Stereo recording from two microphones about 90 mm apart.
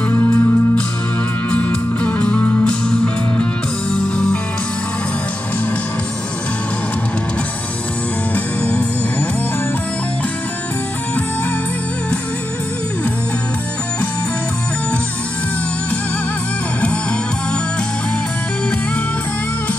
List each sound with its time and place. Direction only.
0.1 s music: 25° left (ahead or behind)
1.5 s music: 10° left (ahead or behind)
8.6 s music: 15° left (ahead or behind)